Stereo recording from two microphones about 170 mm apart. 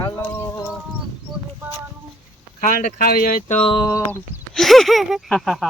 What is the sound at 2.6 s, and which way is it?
Speech, 55° left (ahead or behind).